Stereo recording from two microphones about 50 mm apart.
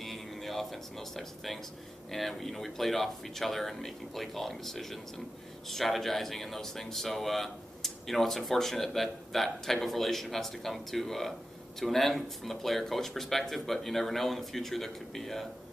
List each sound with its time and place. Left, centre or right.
0.0 s speech: centre